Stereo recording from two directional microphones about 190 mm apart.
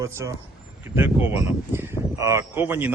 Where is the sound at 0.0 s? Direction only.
15° right (ahead or behind).